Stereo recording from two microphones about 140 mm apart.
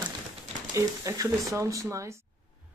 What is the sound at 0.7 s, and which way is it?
Speech, 25° right (ahead or behind).